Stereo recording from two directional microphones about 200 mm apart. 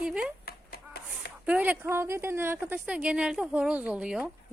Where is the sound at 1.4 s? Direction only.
5° right (ahead or behind).